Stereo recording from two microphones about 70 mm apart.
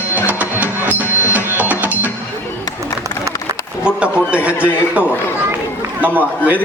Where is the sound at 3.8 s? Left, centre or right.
Centre.